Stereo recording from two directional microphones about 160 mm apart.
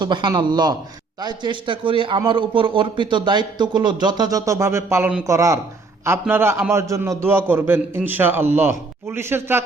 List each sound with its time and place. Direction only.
0.0 s a man's voice: 30° right (ahead or behind)